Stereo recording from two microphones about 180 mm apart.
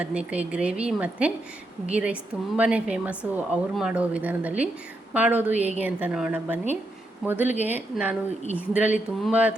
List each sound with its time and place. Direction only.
0.0 s a woman's voice: 5° right (ahead or behind)